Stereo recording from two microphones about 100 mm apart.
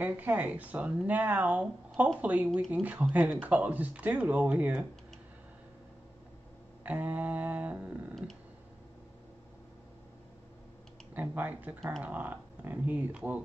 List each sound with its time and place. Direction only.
0.0 s speech: 20° right (ahead or behind)
6.8 s speech: 15° right (ahead or behind)
8.1 s a sound: 5° left (ahead or behind)
11.1 s speech: 20° right (ahead or behind)